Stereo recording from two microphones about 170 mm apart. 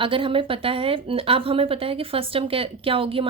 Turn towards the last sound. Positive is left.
turn(degrees=-30)  # may be behind; listen again after turning